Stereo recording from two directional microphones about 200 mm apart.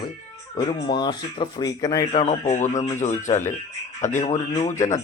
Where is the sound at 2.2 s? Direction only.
35° left (ahead or behind).